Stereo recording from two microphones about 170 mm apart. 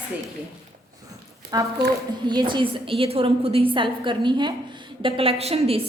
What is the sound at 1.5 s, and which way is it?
A woman's voice, 20° right (ahead or behind).